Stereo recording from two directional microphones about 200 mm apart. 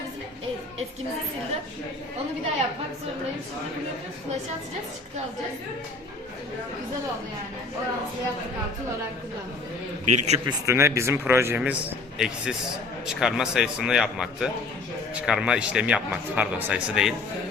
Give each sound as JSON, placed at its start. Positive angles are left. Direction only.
{"t": 10.1, "sound": "a man's voice", "side_deg": -35}
{"t": 10.4, "sound": "a man's voice", "side_deg": -15}